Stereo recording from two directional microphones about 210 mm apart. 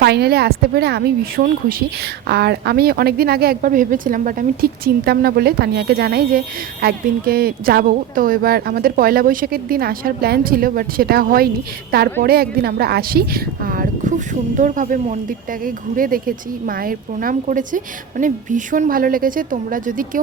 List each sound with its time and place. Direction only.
0.0 s a woman's voice: 50° right (ahead or behind)